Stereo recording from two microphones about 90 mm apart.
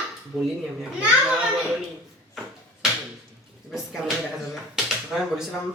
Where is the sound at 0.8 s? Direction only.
10° right (ahead or behind).